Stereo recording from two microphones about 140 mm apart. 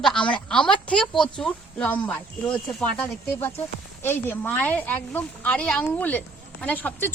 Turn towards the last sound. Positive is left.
turn(degrees=10)  # may be behind; listen again after turning